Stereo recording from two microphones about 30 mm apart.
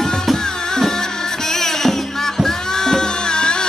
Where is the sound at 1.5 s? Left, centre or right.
Centre.